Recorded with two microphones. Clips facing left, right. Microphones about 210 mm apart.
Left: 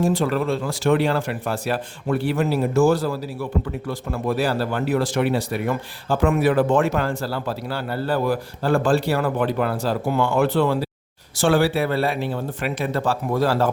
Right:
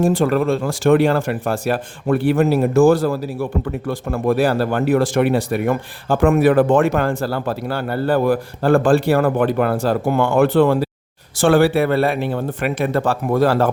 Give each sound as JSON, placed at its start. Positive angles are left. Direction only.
{"t": 0.0, "sound": "speech", "side_deg": -50}